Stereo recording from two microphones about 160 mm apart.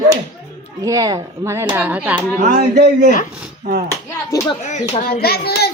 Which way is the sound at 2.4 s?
70° right (ahead or behind).